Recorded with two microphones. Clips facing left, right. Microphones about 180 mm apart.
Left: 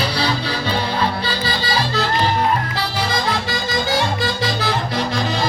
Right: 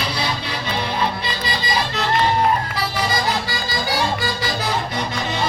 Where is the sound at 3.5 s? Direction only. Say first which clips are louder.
Left 4 dB; 25° left (ahead or behind).